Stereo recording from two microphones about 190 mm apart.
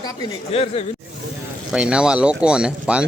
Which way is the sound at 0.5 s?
30° left (ahead or behind).